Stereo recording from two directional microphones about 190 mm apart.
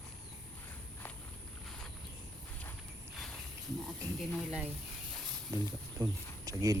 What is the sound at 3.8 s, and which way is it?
Speech, centre (ahead or behind).